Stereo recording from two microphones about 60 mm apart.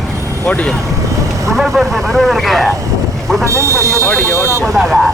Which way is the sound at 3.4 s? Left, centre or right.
Right.